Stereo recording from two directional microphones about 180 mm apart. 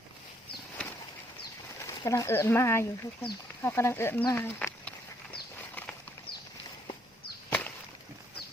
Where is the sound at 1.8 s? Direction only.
15° left (ahead or behind).